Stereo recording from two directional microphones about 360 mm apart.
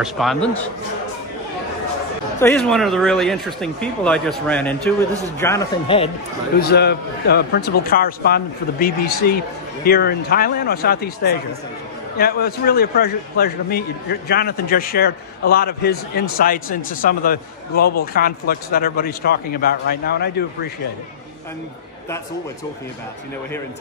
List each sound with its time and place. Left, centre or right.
0.0 s speech: centre
2.4 s speech: centre
6.6 s a man's voice: left